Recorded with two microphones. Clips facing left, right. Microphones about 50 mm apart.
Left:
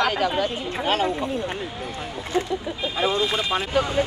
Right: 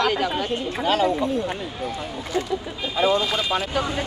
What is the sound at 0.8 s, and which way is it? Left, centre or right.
Speech, left.